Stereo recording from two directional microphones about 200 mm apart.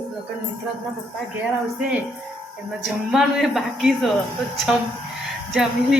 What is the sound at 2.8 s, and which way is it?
Speech, centre (ahead or behind).